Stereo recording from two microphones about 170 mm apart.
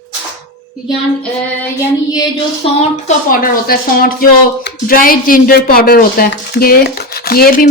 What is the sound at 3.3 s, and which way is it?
Speech, 60° left (ahead or behind).